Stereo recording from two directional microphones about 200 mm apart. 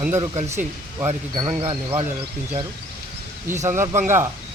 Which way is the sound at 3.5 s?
15° right (ahead or behind).